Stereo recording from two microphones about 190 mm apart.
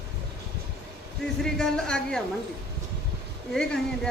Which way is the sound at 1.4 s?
5° left (ahead or behind).